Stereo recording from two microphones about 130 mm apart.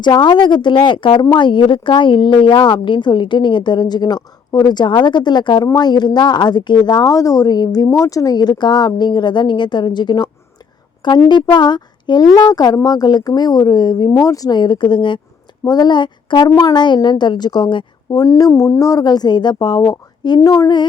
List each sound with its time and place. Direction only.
0.0 s speech: 35° left (ahead or behind)